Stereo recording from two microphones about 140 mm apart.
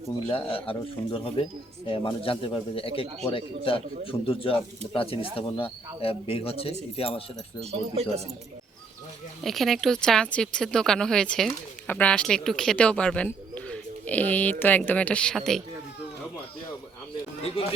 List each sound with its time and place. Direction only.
0.3 s speech: 40° left (ahead or behind)
7.7 s speech: 50° right (ahead or behind)
9.4 s speech: centre (ahead or behind)
13.6 s a sound: 10° left (ahead or behind)
14.6 s speech: 15° left (ahead or behind)